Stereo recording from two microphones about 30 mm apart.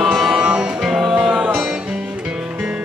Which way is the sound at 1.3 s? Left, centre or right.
Right.